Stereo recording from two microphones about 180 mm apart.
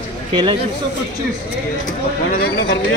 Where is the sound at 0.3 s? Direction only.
25° right (ahead or behind).